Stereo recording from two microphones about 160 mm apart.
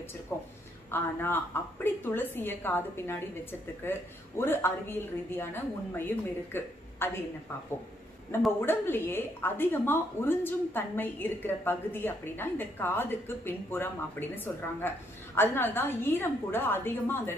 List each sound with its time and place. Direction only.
0.3 s speech: 15° left (ahead or behind)
8.5 s speech: 15° left (ahead or behind)